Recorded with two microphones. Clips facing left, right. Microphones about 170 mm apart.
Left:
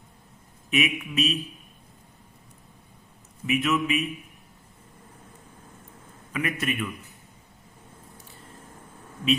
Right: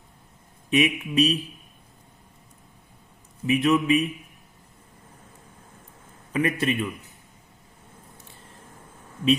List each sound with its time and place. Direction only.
0.7 s speech: 35° right (ahead or behind)
3.4 s speech: 35° right (ahead or behind)
6.3 s a man's voice: 30° right (ahead or behind)